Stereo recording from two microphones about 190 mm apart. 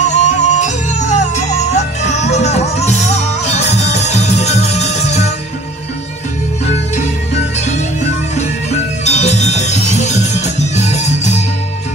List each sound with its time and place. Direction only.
0.0 s music: 40° left (ahead or behind)
6.6 s music: 35° left (ahead or behind)